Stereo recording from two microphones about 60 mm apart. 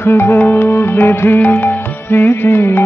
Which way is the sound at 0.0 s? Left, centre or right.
Left.